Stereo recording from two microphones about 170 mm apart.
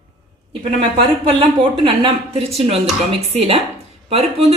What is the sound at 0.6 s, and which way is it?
A woman's voice, 35° right (ahead or behind).